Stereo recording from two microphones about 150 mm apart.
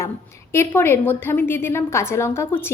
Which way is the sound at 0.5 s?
15° left (ahead or behind).